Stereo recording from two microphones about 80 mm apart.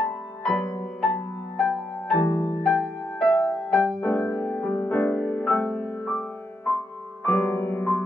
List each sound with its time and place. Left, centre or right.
0.0 s music: centre
2.1 s music: left
2.6 s music: centre
7.2 s music: left